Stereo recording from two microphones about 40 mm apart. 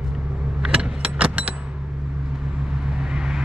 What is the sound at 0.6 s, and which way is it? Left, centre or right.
Vehicle, centre.